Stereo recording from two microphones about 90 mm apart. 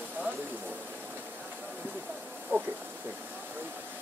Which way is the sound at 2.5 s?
25° right (ahead or behind).